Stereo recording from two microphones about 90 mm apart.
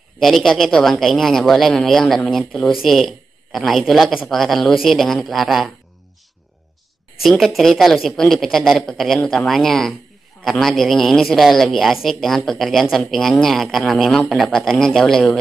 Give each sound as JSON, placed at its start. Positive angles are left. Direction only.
{"t": 0.2, "sound": "speech", "side_deg": 0}
{"t": 7.2, "sound": "speech", "side_deg": 0}